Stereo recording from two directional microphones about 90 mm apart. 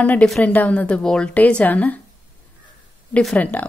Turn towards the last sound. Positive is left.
turn(degrees=20)  # may be behind; listen again after turning